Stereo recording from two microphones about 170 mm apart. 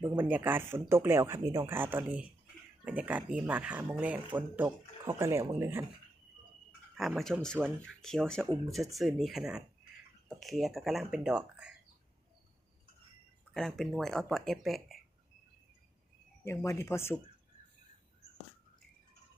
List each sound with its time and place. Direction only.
0.0 s speech: 10° right (ahead or behind)
6.9 s speech: centre (ahead or behind)
13.5 s speech: 5° left (ahead or behind)
16.4 s speech: 15° left (ahead or behind)